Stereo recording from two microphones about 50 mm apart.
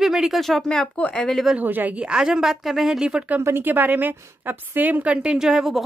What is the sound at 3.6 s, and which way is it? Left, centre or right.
A woman's voice, right.